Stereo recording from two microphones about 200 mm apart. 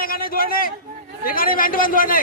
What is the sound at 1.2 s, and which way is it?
Speech, 45° left (ahead or behind).